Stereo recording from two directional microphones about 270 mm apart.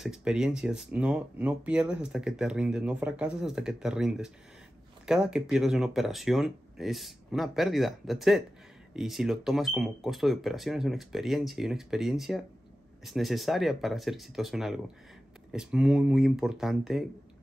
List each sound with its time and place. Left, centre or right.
0.0 s speech: centre